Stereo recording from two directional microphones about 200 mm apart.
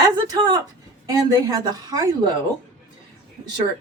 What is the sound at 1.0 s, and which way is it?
A woman's voice, 20° right (ahead or behind).